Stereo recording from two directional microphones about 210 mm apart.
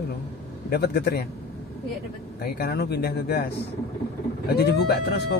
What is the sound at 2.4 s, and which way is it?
Speech, 45° left (ahead or behind).